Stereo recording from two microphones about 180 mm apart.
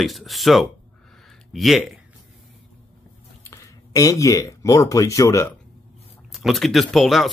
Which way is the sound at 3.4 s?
15° left (ahead or behind).